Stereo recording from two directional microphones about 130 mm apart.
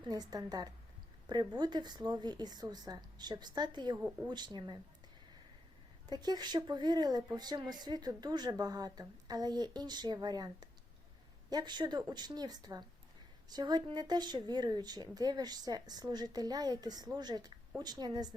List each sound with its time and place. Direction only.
0.1 s a woman's voice: 30° right (ahead or behind)
6.1 s speech: 30° right (ahead or behind)